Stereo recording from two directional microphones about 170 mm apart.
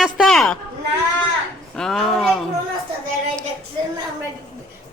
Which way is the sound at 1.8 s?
Centre (ahead or behind).